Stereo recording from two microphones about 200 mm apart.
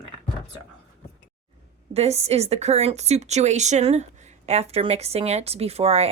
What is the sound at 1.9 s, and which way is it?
A woman's voice, 30° right (ahead or behind).